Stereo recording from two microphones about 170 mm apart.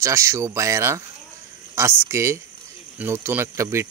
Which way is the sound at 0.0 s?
15° right (ahead or behind).